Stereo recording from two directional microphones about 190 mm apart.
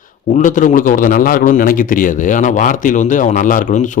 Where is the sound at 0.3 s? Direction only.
40° left (ahead or behind).